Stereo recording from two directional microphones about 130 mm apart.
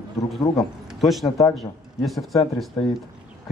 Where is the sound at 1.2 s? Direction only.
25° left (ahead or behind).